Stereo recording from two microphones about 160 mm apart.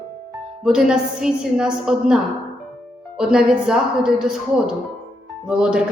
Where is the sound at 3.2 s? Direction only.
5° right (ahead or behind).